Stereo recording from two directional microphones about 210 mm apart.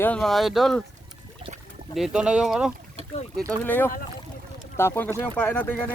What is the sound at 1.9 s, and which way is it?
Speech, centre (ahead or behind).